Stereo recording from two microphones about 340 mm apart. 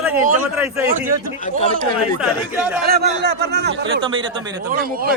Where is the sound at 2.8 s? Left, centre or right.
Right.